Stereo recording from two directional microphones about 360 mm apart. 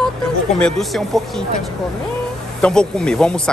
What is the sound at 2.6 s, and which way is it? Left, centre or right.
Speech, centre.